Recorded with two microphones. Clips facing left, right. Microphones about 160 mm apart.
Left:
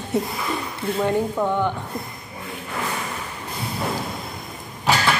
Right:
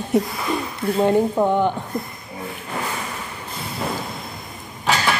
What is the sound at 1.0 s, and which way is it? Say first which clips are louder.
Speech: right 5 dB; 25° right (ahead or behind).